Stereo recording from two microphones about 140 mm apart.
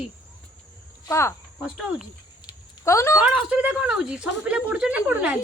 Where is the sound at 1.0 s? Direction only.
20° left (ahead or behind).